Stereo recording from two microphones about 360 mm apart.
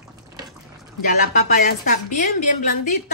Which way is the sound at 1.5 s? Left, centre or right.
Left.